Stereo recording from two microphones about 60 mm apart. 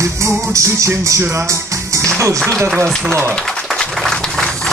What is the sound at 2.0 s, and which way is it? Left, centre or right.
Speech, right.